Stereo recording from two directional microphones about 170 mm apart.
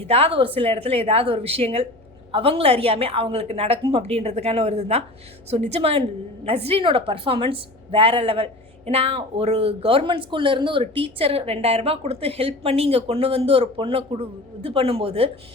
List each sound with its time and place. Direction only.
0.1 s speech: 35° right (ahead or behind)